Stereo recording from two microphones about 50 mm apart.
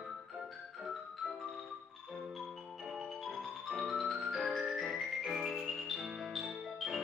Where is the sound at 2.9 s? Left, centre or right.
Centre.